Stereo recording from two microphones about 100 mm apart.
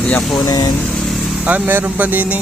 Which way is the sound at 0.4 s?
40° left (ahead or behind).